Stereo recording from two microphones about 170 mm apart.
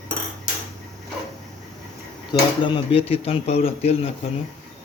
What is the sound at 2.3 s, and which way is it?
Speech, 30° left (ahead or behind).